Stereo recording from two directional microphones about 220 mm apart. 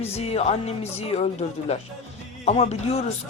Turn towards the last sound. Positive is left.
turn(degrees=30)  # may be behind; listen again after turning